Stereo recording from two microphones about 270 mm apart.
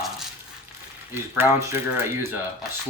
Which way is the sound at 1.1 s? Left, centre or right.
Centre.